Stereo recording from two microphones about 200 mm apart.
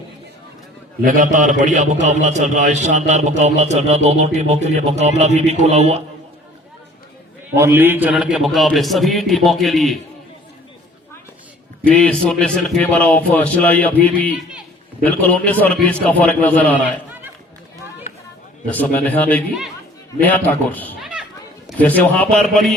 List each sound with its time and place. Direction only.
1.0 s a man's voice: 40° right (ahead or behind)
7.5 s a man's voice: 15° right (ahead or behind)
11.9 s a man's voice: 5° left (ahead or behind)
18.6 s a man's voice: 10° left (ahead or behind)